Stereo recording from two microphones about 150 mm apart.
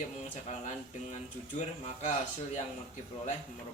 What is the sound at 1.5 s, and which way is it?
Speech, 50° left (ahead or behind).